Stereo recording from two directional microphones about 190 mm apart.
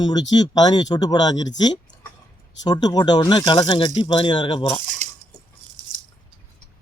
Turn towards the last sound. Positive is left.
turn(degrees=-35)  # may be behind; listen again after turning